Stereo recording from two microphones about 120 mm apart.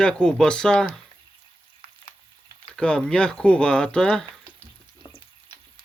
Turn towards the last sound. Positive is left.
turn(degrees=5)  # may be behind; listen again after turning